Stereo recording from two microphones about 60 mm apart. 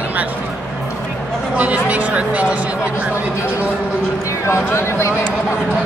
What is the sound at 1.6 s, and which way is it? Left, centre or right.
Speech, right.